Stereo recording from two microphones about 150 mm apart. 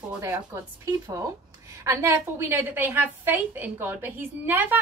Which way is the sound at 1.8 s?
20° right (ahead or behind).